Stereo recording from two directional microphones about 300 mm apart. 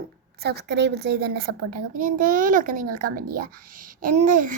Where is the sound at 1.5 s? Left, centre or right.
Right.